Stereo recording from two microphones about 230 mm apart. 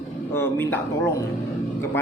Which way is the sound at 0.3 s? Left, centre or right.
Centre.